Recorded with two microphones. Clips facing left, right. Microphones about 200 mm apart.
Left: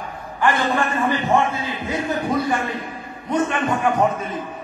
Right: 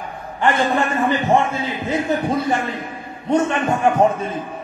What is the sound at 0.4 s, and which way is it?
Speech, 25° right (ahead or behind).